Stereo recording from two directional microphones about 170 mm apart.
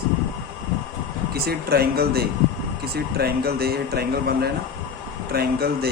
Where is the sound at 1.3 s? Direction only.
65° right (ahead or behind).